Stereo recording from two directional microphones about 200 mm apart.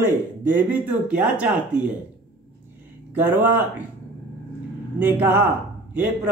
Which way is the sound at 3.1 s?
10° right (ahead or behind).